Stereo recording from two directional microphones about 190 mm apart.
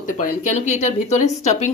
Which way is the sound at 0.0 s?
40° left (ahead or behind).